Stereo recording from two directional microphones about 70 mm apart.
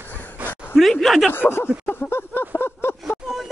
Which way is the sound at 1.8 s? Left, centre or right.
Left.